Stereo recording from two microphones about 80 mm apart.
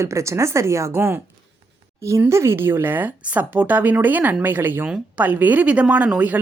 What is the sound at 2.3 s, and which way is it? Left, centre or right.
Speech, right.